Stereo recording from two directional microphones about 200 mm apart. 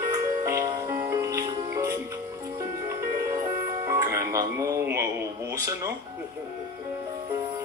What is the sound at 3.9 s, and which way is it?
Music, 15° right (ahead or behind).